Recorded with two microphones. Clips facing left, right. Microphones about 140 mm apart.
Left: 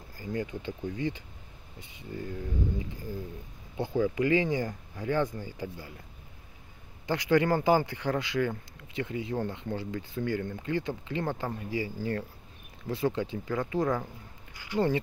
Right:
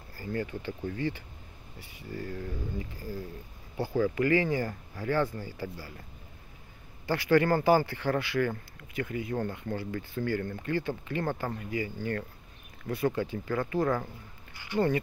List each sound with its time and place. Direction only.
0.2 s speech: 15° left (ahead or behind)
7.1 s speech: 15° left (ahead or behind)
14.5 s a sound: 10° left (ahead or behind)